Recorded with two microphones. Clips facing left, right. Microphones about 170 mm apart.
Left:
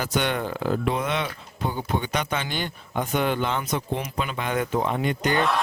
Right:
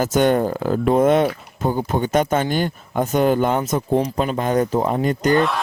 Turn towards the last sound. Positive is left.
turn(degrees=0)  # may be behind; listen again after turning